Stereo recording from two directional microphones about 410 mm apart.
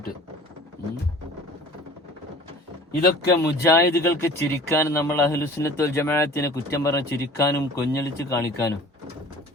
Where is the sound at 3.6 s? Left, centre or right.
Centre.